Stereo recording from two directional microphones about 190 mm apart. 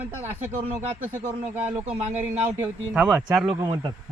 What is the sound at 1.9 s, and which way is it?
Speech, 35° right (ahead or behind).